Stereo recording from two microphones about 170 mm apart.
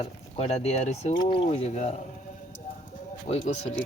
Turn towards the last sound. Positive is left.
turn(degrees=40)  # may be behind; listen again after turning